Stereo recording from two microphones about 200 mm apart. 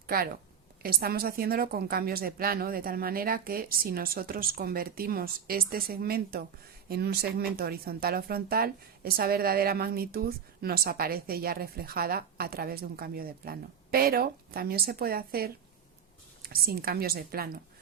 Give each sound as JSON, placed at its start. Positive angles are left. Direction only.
{"t": 0.1, "sound": "speech", "side_deg": -45}